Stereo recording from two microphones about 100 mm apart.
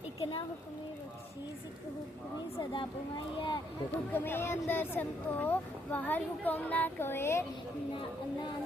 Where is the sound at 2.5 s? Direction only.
55° left (ahead or behind).